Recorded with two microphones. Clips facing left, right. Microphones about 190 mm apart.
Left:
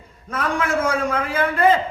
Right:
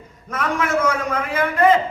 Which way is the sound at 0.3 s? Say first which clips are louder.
Even; 30° left (ahead or behind).